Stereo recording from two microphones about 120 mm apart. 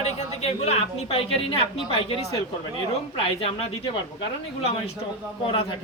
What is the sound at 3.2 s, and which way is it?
Speech, 55° left (ahead or behind).